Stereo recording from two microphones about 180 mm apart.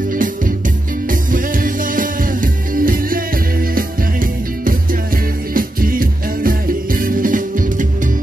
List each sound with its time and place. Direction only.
1.3 s music: 50° right (ahead or behind)
5.5 s music: 50° right (ahead or behind)